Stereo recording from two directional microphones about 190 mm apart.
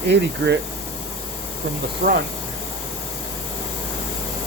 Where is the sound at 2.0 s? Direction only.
55° right (ahead or behind).